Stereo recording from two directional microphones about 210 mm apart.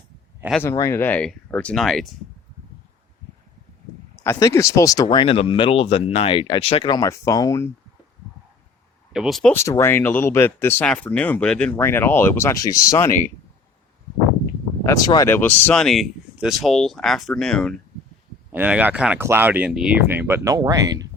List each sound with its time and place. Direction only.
0.6 s speech: 10° left (ahead or behind)
4.2 s speech: 15° left (ahead or behind)
5.0 s speech: 25° left (ahead or behind)
9.1 s speech: centre (ahead or behind)
9.6 s speech: 15° left (ahead or behind)
14.8 s speech: 20° left (ahead or behind); by 17.7 s 5° left (ahead or behind)
18.5 s speech: 10° right (ahead or behind)